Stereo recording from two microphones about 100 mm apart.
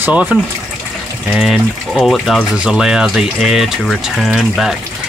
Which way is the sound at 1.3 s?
5° right (ahead or behind).